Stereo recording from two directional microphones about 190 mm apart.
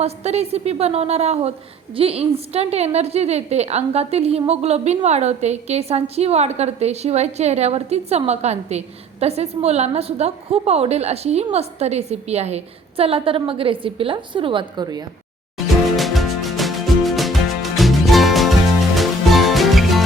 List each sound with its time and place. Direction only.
0.0 s a woman's voice: 35° right (ahead or behind)
15.5 s music: centre (ahead or behind)